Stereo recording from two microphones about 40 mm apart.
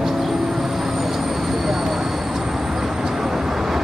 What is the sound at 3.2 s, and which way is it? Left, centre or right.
Vehicle, centre.